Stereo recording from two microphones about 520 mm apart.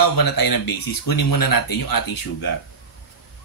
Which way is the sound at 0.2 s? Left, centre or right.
Left.